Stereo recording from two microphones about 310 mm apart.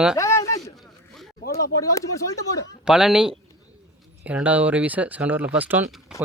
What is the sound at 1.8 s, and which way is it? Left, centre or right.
Speech, centre.